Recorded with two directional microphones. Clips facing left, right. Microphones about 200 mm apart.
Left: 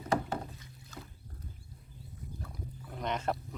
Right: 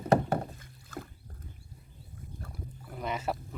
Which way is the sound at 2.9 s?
5° right (ahead or behind).